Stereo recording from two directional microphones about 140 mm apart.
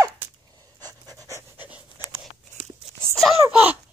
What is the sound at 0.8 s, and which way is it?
Pant, 25° right (ahead or behind).